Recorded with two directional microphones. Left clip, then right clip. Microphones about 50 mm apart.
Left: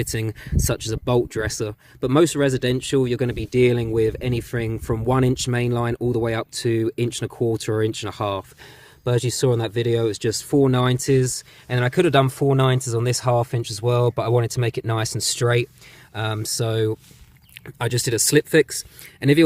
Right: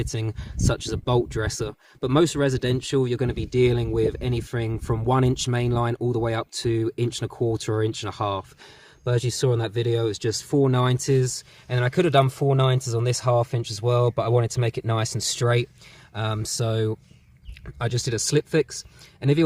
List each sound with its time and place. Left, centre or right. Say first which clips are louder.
0.0 s speech: left 4 dB; right
2.1 s speech: left 3 dB; centre; by 6.7 s right
6.7 s speech: left 3 dB; centre
7.4 s speech: left 3 dB; right
7.9 s speech: left 2 dB; centre
11.8 s speech: left 2 dB; left
12.9 s speech: left 2 dB; centre
14.4 s speech: left 2 dB; centre